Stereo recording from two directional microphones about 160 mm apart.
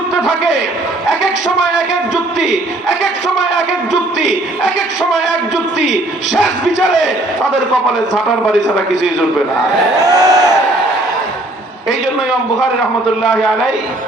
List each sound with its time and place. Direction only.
10.0 s speech: 25° right (ahead or behind)